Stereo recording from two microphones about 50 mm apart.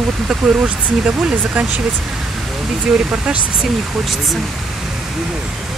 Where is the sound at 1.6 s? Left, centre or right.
Right.